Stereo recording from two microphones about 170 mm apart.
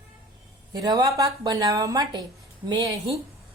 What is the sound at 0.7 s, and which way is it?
A woman's voice, 25° right (ahead or behind).